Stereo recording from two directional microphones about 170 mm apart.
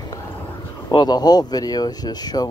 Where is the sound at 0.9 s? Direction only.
25° left (ahead or behind).